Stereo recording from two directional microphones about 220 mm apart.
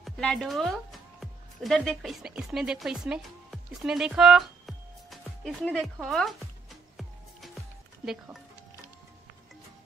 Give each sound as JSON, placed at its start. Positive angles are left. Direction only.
{"t": 0.0, "sound": "a woman's voice", "side_deg": 0}
{"t": 6.0, "sound": "music", "side_deg": 0}
{"t": 8.0, "sound": "speech", "side_deg": 0}